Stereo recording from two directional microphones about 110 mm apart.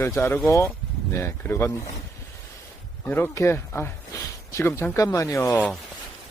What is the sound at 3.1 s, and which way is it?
A man's voice, 20° left (ahead or behind).